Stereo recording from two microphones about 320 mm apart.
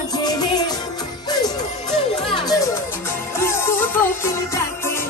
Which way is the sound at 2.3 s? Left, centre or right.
Centre.